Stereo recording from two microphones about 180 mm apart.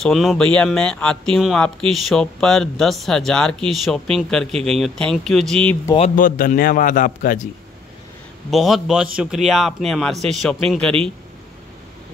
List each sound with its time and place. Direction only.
0.0 s speech: centre (ahead or behind)
5.9 s a man's voice: 45° left (ahead or behind)
8.5 s speech: centre (ahead or behind)